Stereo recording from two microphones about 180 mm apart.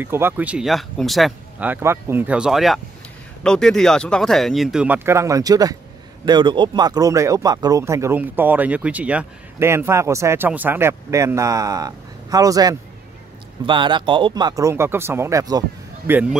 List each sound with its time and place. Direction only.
0.0 s speech: 10° right (ahead or behind)
16.1 s speech: 10° right (ahead or behind)